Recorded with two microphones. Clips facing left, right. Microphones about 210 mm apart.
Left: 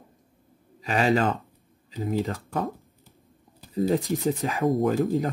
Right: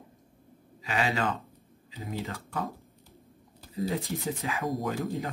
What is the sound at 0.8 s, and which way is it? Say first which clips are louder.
Speech: left 7 dB; 45° left (ahead or behind).